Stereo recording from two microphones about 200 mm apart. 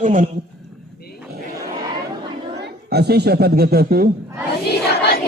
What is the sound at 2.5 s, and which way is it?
A woman's voice, 55° right (ahead or behind).